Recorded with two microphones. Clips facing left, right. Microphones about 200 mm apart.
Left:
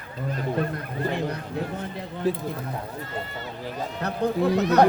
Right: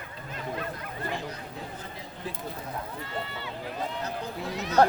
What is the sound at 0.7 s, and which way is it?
Speech, 60° left (ahead or behind).